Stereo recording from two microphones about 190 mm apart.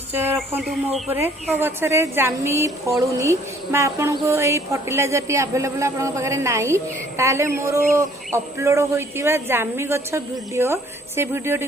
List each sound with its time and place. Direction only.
0.1 s speech: 10° right (ahead or behind)
1.1 s speech: 10° right (ahead or behind)